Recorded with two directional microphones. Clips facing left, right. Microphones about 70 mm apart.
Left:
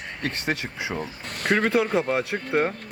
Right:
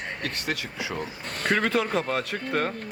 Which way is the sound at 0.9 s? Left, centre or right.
Centre.